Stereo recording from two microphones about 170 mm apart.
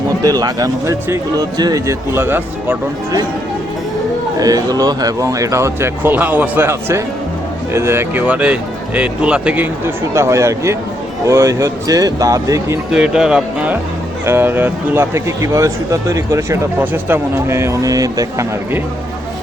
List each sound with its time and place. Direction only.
0.2 s speech: 20° right (ahead or behind)
4.4 s speech: 20° right (ahead or behind)
12.9 s speech: 5° right (ahead or behind); by 18.8 s 20° right (ahead or behind)